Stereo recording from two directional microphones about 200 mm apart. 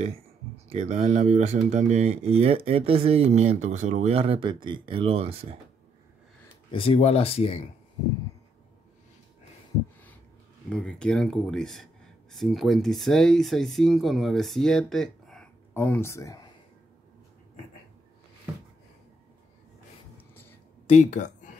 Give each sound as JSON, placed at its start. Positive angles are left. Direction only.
{"t": 0.7, "sound": "speech", "side_deg": -35}
{"t": 6.7, "sound": "speech", "side_deg": 30}
{"t": 10.7, "sound": "speech", "side_deg": 5}
{"t": 20.9, "sound": "speech", "side_deg": 35}